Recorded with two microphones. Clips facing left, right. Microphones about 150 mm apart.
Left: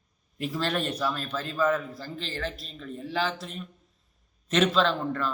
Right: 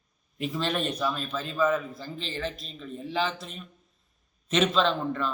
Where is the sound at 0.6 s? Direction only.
15° right (ahead or behind).